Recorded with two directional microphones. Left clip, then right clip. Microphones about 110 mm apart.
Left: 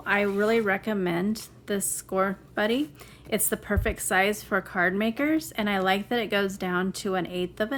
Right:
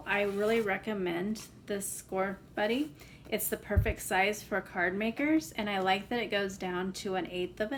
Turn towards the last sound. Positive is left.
turn(degrees=50)  # may be behind; listen again after turning